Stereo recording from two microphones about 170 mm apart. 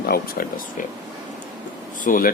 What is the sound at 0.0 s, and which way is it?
Speech, 60° left (ahead or behind).